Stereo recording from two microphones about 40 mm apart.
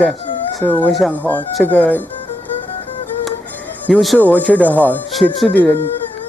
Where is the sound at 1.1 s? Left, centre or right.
Left.